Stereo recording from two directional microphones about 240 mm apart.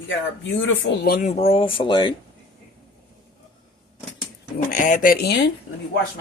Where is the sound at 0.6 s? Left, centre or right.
Left.